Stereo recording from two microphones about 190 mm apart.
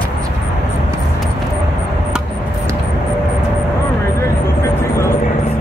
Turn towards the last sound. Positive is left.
turn(degrees=15)  # may be behind; listen again after turning